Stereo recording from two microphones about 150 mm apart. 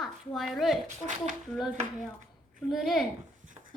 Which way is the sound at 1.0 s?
55° right (ahead or behind).